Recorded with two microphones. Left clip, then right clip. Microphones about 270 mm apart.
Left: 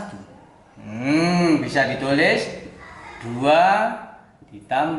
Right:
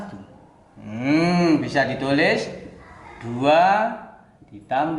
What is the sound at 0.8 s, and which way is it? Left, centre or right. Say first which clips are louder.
Cattle: even; centre.